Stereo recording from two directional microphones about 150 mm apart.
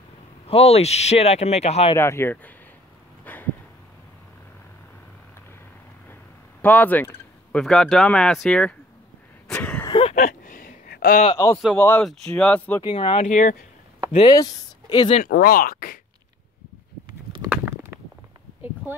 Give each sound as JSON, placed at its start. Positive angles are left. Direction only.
{"t": 0.5, "sound": "speech", "side_deg": 40}
{"t": 2.0, "sound": "speech", "side_deg": 15}
{"t": 3.3, "sound": "a sound", "side_deg": 10}
{"t": 6.6, "sound": "speech", "side_deg": 10}
{"t": 9.5, "sound": "a sound", "side_deg": 10}
{"t": 9.8, "sound": "a sound", "side_deg": 30}
{"t": 10.2, "sound": "a sound", "side_deg": 70}
{"t": 11.3, "sound": "a man's voice", "side_deg": 20}
{"t": 12.8, "sound": "speech", "side_deg": 35}
{"t": 13.3, "sound": "speech", "side_deg": 55}
{"t": 14.3, "sound": "speech", "side_deg": 25}
{"t": 15.2, "sound": "speech", "side_deg": 80}